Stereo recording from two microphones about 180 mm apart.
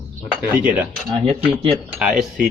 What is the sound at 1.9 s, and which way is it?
Speech, 5° right (ahead or behind).